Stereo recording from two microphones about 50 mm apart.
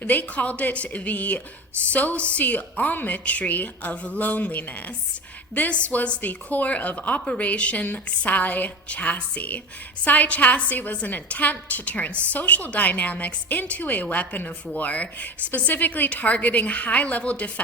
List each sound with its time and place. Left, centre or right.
0.0 s a woman's voice: left
2.4 s a woman's voice: left